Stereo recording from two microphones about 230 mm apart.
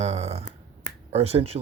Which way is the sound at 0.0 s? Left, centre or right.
Right.